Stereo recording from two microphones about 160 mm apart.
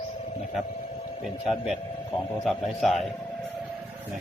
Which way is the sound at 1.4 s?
5° right (ahead or behind).